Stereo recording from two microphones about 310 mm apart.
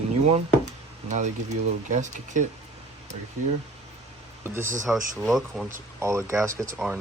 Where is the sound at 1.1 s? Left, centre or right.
Right.